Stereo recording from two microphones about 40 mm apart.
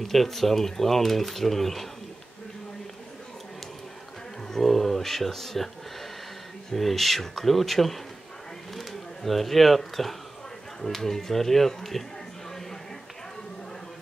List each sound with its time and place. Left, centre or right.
0.0 s speech: centre
4.5 s speech: centre
6.7 s speech: centre